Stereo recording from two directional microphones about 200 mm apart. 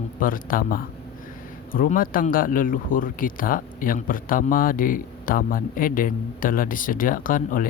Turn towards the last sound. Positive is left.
turn(degrees=45)  # may be behind; listen again after turning